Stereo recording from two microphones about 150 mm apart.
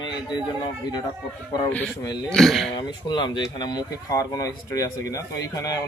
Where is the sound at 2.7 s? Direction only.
30° left (ahead or behind).